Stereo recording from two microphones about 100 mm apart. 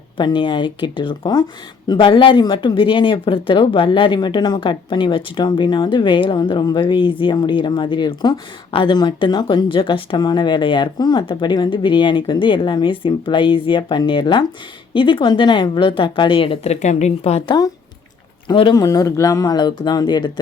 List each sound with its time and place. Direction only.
0.2 s a woman's voice: 50° left (ahead or behind)
17.2 s a woman's voice: 90° left
18.7 s speech: 40° left (ahead or behind)